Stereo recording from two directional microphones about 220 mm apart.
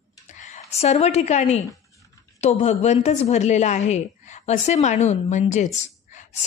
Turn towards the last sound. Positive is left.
turn(degrees=30)  # may be behind; listen again after turning